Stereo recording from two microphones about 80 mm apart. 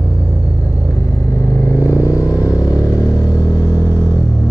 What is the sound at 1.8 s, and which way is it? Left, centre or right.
Vehicle, left.